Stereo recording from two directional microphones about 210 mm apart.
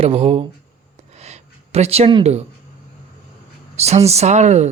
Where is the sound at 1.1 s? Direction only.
30° right (ahead or behind).